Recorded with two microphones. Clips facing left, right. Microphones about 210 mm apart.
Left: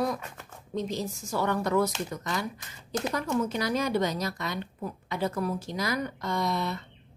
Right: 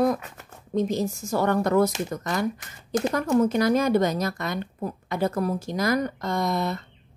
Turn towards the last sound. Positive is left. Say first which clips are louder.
# right 4 dB
turn(degrees=-45)  # may be behind; listen again after turning